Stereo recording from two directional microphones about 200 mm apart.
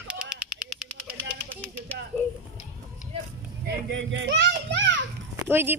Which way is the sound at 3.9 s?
65° right (ahead or behind).